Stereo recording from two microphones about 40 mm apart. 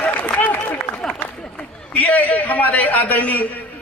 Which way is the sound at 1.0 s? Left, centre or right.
Left.